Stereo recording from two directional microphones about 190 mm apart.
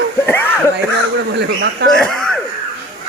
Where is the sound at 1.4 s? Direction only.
60° right (ahead or behind).